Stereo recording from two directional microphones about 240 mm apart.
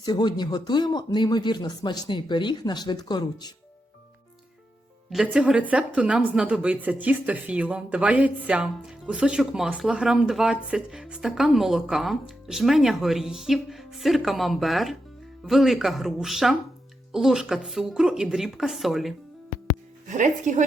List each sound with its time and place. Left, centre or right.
0.0 s speech: centre
5.1 s speech: centre
20.1 s speech: right